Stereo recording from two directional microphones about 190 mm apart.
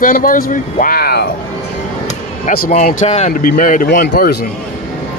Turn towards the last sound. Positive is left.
turn(degrees=55)  # may be behind; listen again after turning